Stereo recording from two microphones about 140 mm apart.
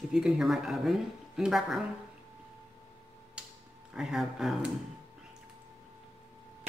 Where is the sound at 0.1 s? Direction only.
5° right (ahead or behind).